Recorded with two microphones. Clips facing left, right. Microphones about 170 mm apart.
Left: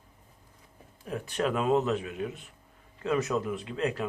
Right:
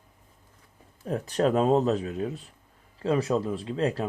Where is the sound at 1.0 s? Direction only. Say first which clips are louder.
Right 5 dB; 40° right (ahead or behind).